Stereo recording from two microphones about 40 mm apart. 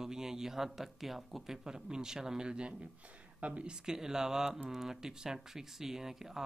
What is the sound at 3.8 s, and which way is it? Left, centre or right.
Speech, centre.